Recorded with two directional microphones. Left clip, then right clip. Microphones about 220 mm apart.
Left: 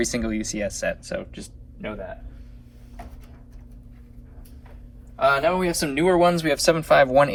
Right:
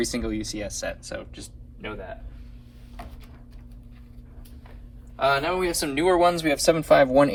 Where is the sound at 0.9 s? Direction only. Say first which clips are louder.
Left 5 dB; 25° right (ahead or behind).